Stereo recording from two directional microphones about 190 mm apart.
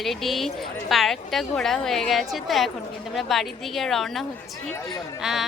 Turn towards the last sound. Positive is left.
turn(degrees=0)  # may be behind; listen again after turning